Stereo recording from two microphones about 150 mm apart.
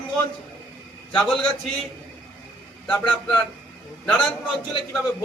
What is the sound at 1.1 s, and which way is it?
Speech, 5° left (ahead or behind).